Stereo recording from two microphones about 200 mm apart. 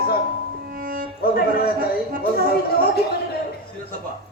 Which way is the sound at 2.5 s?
50° left (ahead or behind).